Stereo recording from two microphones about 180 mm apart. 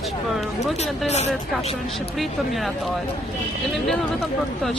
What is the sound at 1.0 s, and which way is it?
Speech, 40° left (ahead or behind).